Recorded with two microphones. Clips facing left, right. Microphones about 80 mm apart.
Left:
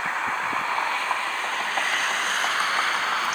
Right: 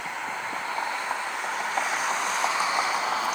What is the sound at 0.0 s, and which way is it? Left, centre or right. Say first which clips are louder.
Vehicle: left 6 dB; left.